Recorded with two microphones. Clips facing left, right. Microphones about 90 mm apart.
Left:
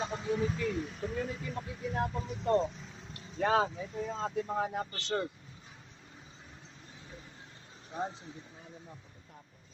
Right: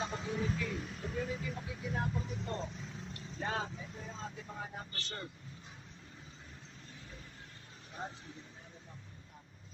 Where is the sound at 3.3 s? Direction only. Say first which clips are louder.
Left 10 dB; 90° left.